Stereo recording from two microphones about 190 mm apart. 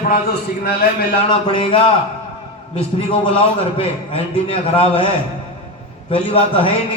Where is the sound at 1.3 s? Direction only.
25° left (ahead or behind).